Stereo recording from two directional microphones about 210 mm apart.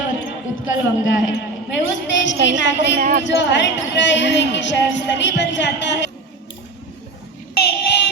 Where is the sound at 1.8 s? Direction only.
60° left (ahead or behind).